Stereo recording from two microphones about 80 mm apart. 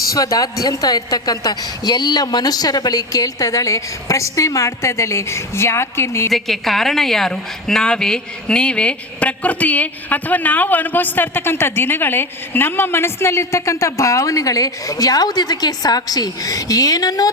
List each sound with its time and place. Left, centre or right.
0.1 s a woman's voice: left
6.3 s a woman's voice: centre; by 17.2 s left